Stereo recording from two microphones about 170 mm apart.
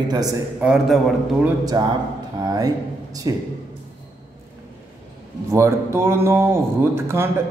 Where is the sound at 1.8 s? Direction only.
20° right (ahead or behind).